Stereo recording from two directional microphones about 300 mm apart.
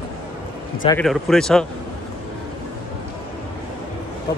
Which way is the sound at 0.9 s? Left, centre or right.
Centre.